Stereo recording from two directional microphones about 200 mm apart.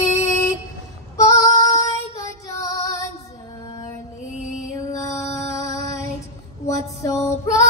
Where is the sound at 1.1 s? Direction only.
15° left (ahead or behind).